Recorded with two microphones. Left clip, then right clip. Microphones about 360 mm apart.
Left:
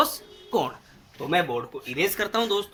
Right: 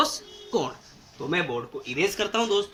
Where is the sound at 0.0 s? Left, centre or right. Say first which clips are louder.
Left 1 dB; centre.